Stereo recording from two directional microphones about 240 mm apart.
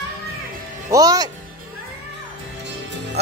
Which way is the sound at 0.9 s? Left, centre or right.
Centre.